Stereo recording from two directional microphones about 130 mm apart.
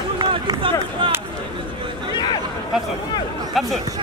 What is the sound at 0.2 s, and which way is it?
Run, 35° right (ahead or behind).